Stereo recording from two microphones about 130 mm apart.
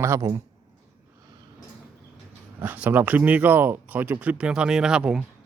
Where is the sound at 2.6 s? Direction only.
15° right (ahead or behind).